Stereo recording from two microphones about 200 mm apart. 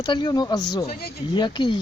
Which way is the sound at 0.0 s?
20° left (ahead or behind).